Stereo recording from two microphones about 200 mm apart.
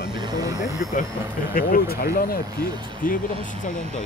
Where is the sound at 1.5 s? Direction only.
45° left (ahead or behind).